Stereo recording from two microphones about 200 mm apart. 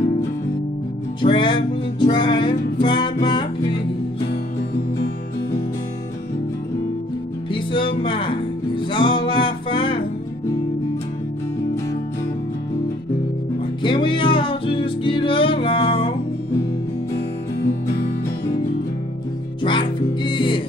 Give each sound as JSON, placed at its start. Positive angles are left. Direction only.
{"t": 1.2, "sound": "music", "side_deg": 25}
{"t": 7.5, "sound": "music", "side_deg": 25}
{"t": 13.8, "sound": "music", "side_deg": 25}
{"t": 19.6, "sound": "music", "side_deg": 25}